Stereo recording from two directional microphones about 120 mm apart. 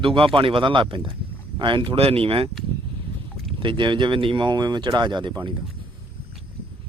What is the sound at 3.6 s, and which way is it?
Speech, 45° right (ahead or behind).